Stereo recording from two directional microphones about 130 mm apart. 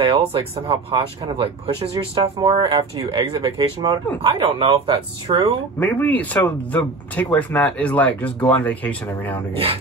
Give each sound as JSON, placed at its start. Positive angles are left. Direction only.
{"t": 0.0, "sound": "speech", "side_deg": -45}
{"t": 5.8, "sound": "speech", "side_deg": 15}